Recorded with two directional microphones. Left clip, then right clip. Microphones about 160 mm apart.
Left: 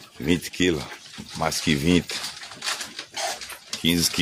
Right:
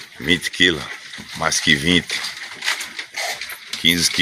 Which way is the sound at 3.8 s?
25° left (ahead or behind).